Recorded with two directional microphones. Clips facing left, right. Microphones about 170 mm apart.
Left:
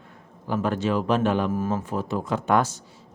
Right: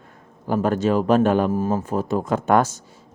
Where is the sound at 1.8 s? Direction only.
45° right (ahead or behind).